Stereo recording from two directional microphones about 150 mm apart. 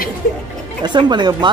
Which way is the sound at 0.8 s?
30° right (ahead or behind).